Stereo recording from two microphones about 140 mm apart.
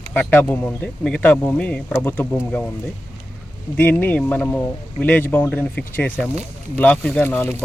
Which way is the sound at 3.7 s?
15° left (ahead or behind).